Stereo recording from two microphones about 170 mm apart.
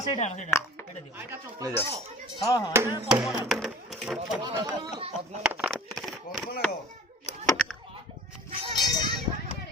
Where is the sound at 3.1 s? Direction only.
5° right (ahead or behind).